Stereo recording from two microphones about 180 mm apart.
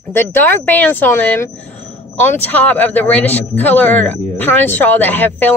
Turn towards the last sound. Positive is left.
turn(degrees=10)  # may be behind; listen again after turning